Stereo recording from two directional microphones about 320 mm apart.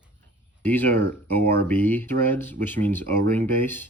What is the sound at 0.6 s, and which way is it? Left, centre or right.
Speech, centre.